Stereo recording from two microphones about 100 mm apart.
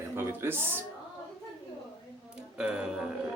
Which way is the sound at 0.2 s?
25° right (ahead or behind).